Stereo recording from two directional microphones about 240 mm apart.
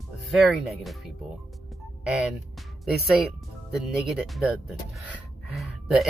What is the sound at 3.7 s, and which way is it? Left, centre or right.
Speech, centre.